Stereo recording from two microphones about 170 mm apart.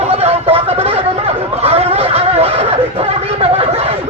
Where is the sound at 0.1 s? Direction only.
35° right (ahead or behind).